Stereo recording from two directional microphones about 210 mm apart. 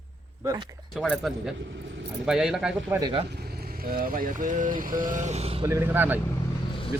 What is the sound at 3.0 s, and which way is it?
Speech, 20° right (ahead or behind).